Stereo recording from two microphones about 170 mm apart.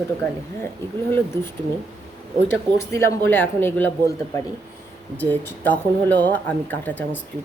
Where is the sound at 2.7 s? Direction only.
15° left (ahead or behind).